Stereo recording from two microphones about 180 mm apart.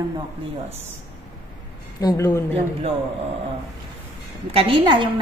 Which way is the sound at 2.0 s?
15° left (ahead or behind).